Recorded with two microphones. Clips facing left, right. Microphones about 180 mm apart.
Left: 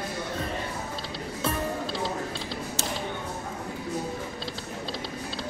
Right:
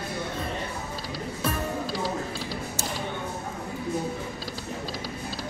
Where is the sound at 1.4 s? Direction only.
25° left (ahead or behind).